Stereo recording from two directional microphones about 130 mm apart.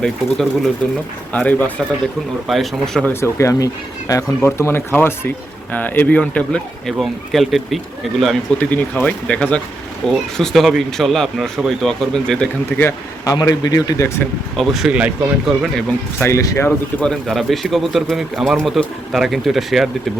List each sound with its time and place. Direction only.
0.0 s speech: 5° left (ahead or behind)
2.5 s speech: centre (ahead or behind)
3.1 s speech: 20° left (ahead or behind)
12.8 s speech: 25° left (ahead or behind)
14.5 s speech: centre (ahead or behind)
16.2 s speech: 25° left (ahead or behind)
17.0 s speech: 5° left (ahead or behind)